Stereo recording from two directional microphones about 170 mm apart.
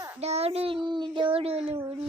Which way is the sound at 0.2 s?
40° right (ahead or behind).